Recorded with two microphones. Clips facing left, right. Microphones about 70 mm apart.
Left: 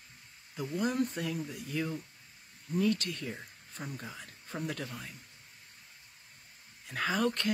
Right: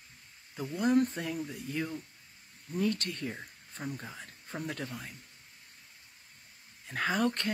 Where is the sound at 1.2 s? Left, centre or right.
Right.